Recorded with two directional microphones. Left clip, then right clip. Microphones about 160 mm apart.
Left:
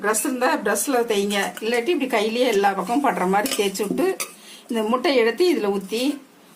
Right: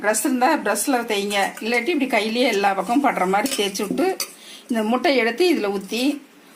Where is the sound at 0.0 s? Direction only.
20° right (ahead or behind).